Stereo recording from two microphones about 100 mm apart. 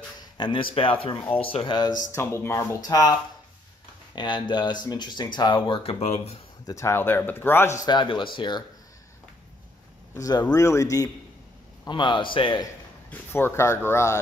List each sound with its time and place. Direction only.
0.4 s speech: 55° left (ahead or behind)
2.1 s speech: 30° left (ahead or behind)
2.8 s speech: 40° left (ahead or behind); by 6.4 s 80° left
6.6 s speech: 30° left (ahead or behind)
7.8 s speech: 50° left (ahead or behind)
10.1 s speech: 35° left (ahead or behind)
11.9 s speech: 50° left (ahead or behind)
13.1 s speech: 20° left (ahead or behind)